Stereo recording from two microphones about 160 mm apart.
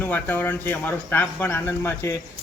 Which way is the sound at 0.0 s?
10° left (ahead or behind).